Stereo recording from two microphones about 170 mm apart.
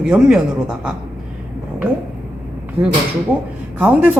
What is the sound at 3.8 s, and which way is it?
Speech, 10° right (ahead or behind).